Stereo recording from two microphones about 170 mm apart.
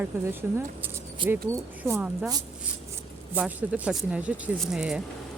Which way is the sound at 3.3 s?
10° right (ahead or behind).